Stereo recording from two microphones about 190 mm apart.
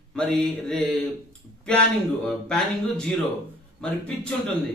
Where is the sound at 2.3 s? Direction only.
Centre (ahead or behind).